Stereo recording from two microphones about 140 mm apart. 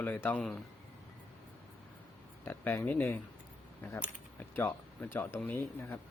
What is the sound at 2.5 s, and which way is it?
Speech, 15° left (ahead or behind).